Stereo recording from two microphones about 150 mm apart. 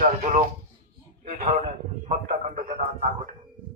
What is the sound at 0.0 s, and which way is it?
Speech, 50° right (ahead or behind).